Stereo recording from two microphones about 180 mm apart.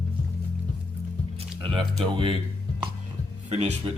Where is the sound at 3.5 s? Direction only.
40° right (ahead or behind).